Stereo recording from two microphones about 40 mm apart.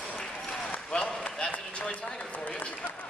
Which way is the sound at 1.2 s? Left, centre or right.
Left.